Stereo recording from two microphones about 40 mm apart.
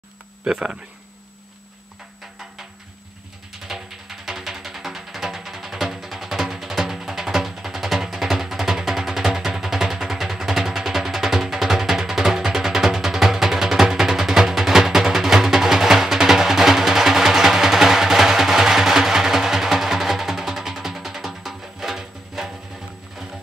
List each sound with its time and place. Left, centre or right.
0.5 s speech: centre
3.6 s music: centre